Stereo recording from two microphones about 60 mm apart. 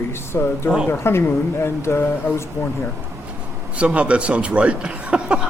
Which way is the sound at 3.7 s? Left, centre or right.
Right.